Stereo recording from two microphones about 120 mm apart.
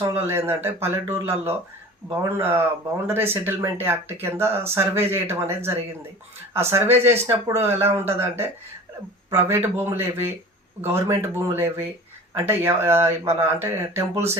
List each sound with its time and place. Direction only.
0.2 s speech: 20° right (ahead or behind)